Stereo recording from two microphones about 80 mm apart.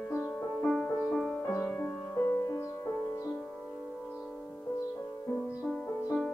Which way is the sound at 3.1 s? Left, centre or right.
Left.